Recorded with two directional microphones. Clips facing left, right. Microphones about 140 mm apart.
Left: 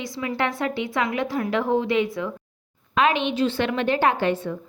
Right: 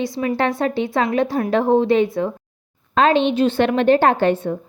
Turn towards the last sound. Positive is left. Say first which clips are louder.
# right 6 dB
turn(degrees=-55)  # may be behind; listen again after turning